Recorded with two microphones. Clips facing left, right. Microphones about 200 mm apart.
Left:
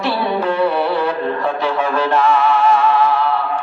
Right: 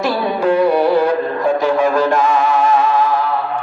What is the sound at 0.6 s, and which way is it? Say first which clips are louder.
Music: right 5 dB; 45° right (ahead or behind).